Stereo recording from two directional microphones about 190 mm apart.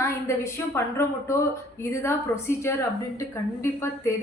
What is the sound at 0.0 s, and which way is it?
A woman's voice, 15° left (ahead or behind).